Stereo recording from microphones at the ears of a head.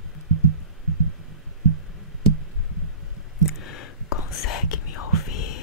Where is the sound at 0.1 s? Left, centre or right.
Right.